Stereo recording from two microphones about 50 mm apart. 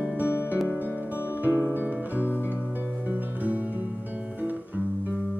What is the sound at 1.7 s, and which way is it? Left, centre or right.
Music, right.